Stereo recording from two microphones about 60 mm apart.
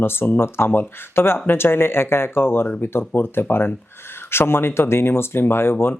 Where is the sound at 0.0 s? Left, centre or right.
Left.